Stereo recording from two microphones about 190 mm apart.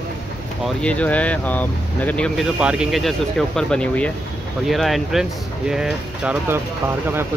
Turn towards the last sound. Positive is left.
turn(degrees=-10)  # may be behind; listen again after turning